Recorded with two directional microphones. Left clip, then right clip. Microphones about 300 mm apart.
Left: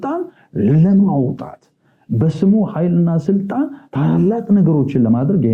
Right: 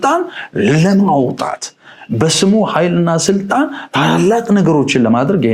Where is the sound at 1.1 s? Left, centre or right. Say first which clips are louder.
Right 6 dB; right.